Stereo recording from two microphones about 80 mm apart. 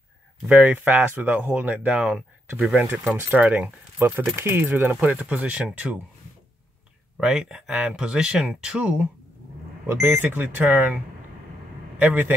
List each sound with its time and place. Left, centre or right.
0.5 s speech: right
2.0 s speech: centre
2.9 s speech: centre
5.3 s speech: centre
7.2 s speech: centre
9.8 s speech: right
12.0 s speech: right